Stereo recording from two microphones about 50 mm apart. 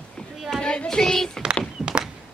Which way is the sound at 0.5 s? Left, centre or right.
Centre.